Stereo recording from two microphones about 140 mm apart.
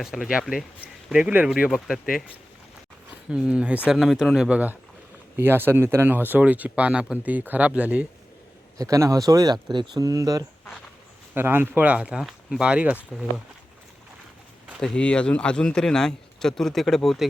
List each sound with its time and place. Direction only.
0.0 s speech: 5° right (ahead or behind)
3.2 s speech: 5° right (ahead or behind)
8.8 s speech: 25° right (ahead or behind)
14.8 s speech: 5° left (ahead or behind)